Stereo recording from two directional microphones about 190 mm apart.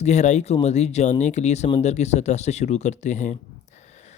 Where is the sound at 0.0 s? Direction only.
35° left (ahead or behind).